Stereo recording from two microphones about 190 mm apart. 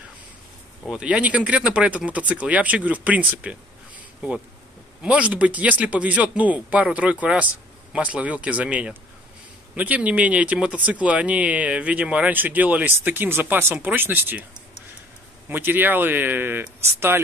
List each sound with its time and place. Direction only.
0.8 s speech: 5° right (ahead or behind)
5.0 s speech: 5° right (ahead or behind)
15.5 s speech: 10° right (ahead or behind)